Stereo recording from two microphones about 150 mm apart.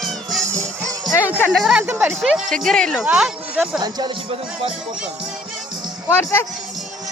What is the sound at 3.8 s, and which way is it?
Speech, 25° right (ahead or behind).